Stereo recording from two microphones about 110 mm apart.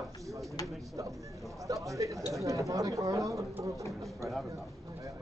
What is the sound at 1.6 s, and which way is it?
A man's voice, 30° right (ahead or behind).